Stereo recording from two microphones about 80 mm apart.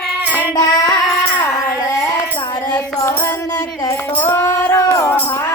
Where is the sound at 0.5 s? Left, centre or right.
Left.